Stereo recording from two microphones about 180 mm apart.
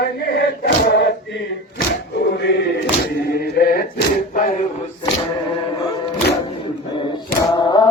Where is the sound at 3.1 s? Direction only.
60° left (ahead or behind).